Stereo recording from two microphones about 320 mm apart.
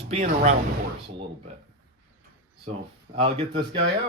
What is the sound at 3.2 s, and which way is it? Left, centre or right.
Speech, centre.